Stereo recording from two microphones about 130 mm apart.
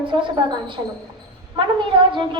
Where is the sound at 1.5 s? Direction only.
40° right (ahead or behind).